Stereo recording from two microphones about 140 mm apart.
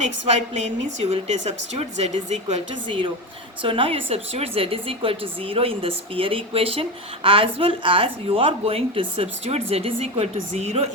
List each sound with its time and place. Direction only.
0.6 s speech: 55° right (ahead or behind)
2.8 s speech: 35° right (ahead or behind)